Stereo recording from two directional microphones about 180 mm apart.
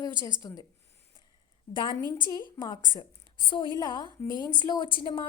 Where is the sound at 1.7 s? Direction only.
25° left (ahead or behind).